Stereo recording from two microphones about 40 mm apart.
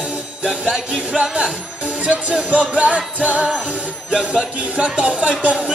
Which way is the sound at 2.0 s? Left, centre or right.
Right.